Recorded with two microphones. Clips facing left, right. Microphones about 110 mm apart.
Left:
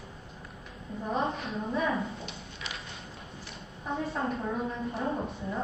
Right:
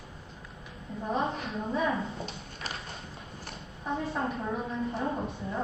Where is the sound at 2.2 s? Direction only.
40° right (ahead or behind).